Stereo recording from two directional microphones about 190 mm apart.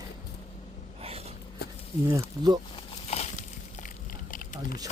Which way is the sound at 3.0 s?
35° left (ahead or behind).